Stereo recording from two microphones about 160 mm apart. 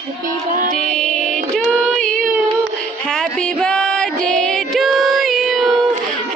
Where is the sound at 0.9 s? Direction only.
5° left (ahead or behind).